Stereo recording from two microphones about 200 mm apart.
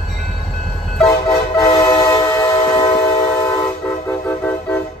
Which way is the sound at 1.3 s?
20° left (ahead or behind).